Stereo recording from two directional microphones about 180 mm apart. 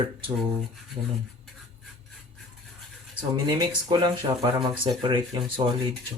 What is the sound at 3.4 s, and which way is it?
Speech, 25° right (ahead or behind).